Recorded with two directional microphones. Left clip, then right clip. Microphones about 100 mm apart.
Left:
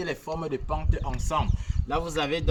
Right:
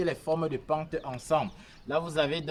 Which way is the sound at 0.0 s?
40° right (ahead or behind).